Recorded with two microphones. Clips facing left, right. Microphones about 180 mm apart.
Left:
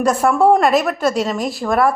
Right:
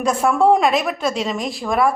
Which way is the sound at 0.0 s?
5° left (ahead or behind).